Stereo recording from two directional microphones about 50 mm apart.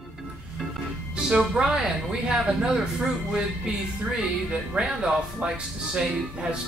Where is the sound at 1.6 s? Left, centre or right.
Centre.